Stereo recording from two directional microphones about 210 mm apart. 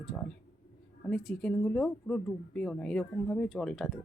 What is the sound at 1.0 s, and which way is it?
Speech, 5° left (ahead or behind).